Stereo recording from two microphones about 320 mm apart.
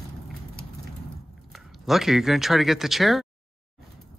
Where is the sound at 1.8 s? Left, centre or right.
Centre.